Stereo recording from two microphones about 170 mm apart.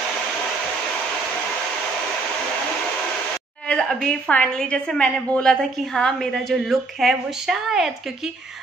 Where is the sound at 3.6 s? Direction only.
5° left (ahead or behind).